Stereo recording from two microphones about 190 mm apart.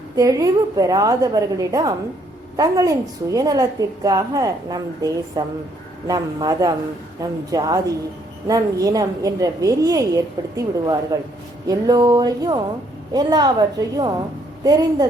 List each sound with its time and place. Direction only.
0.2 s a woman's voice: 20° right (ahead or behind)